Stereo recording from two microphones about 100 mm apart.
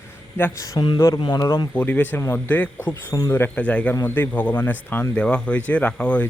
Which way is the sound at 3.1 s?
35° left (ahead or behind).